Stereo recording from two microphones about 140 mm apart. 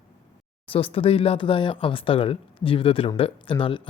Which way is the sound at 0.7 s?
40° left (ahead or behind).